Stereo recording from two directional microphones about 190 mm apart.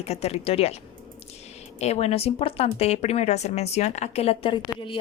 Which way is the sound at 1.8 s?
35° left (ahead or behind).